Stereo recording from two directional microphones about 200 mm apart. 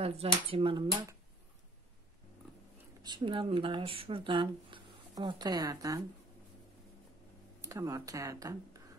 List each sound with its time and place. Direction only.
0.0 s speech: 30° right (ahead or behind)
3.0 s speech: 25° right (ahead or behind)
7.6 s speech: 15° right (ahead or behind)